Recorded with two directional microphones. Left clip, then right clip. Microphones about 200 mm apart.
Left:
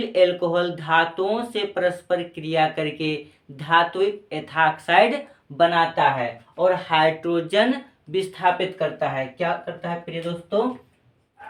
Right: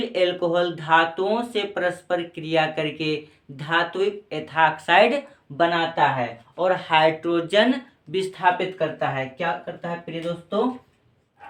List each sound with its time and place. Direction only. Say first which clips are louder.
0.0 s speech: left 3 dB; 15° right (ahead or behind)